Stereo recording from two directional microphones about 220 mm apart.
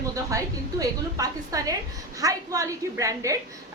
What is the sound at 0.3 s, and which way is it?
A woman's voice, 15° right (ahead or behind).